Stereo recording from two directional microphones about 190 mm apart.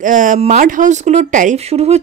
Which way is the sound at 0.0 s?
45° right (ahead or behind).